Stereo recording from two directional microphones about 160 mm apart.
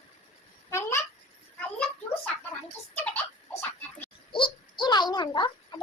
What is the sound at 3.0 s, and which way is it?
Giggle, 10° left (ahead or behind).